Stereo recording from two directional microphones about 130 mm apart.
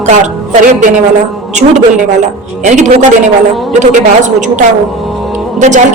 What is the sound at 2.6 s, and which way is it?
A woman's voice, 65° right (ahead or behind).